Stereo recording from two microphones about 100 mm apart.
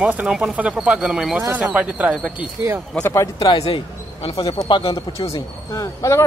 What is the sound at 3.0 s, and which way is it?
Speech, 25° left (ahead or behind).